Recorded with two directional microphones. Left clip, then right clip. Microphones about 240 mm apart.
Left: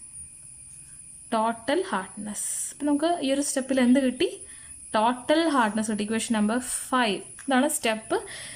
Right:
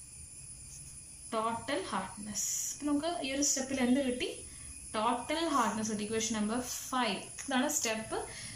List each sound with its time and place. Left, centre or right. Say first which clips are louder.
1.3 s a woman's voice: left 9 dB; left